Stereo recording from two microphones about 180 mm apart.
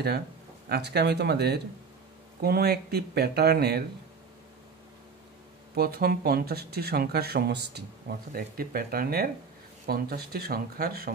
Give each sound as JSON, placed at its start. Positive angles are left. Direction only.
{"t": 0.7, "sound": "speech", "side_deg": -65}
{"t": 5.8, "sound": "speech", "side_deg": -60}
{"t": 8.3, "sound": "speech", "side_deg": -55}